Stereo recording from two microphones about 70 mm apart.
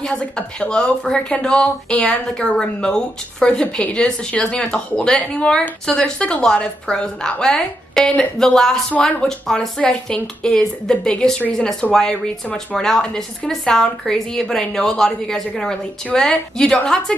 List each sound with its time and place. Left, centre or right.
0.0 s speech: centre